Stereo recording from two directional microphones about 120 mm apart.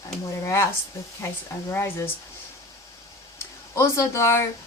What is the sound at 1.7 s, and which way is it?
Speech, 20° left (ahead or behind).